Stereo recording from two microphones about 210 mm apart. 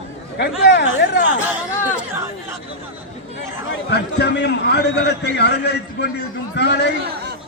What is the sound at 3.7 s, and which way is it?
A man's voice, 55° left (ahead or behind).